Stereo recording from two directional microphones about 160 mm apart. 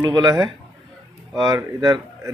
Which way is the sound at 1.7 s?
25° right (ahead or behind).